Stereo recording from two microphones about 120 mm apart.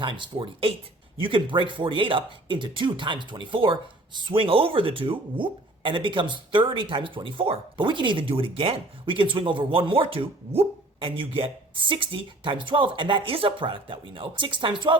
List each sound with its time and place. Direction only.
0.0 s speech: 45° right (ahead or behind)